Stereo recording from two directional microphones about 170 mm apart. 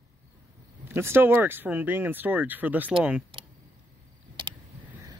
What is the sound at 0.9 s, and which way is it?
Speech, 15° right (ahead or behind).